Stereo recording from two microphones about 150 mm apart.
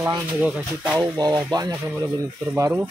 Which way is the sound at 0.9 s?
25° right (ahead or behind).